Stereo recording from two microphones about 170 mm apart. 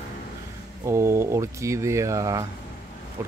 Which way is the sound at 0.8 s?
15° right (ahead or behind).